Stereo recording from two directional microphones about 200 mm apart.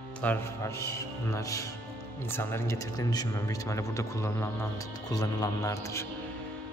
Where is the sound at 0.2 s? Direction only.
10° left (ahead or behind).